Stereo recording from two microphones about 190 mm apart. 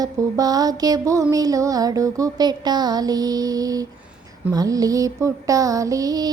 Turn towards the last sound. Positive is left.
turn(degrees=-20)  # may be behind; listen again after turning